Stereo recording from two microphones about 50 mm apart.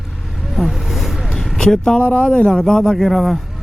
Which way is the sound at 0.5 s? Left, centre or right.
Centre.